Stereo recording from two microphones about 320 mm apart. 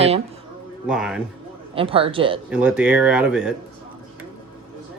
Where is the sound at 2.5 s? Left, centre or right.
Centre.